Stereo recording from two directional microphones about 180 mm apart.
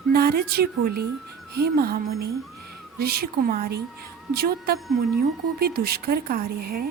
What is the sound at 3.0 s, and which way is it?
A woman's voice, 55° right (ahead or behind).